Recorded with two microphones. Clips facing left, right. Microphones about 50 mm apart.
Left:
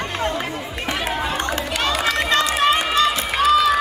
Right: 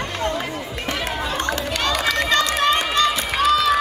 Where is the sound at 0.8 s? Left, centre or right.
Centre.